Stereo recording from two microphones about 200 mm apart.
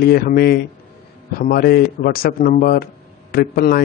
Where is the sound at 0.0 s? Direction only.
50° left (ahead or behind).